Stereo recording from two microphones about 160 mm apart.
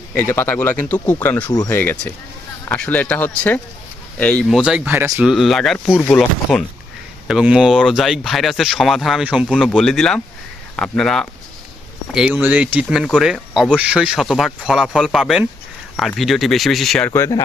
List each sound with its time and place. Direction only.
0.2 s speech: 15° left (ahead or behind)
4.4 s speech: 5° right (ahead or behind)
17.1 s speech: 20° left (ahead or behind)